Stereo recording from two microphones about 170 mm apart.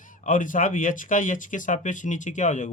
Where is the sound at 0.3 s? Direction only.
50° left (ahead or behind).